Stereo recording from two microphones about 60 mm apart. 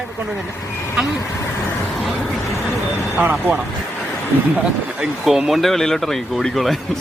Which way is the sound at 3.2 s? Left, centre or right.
Right.